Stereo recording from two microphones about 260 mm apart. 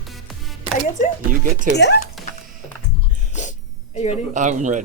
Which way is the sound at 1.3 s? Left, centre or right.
Right.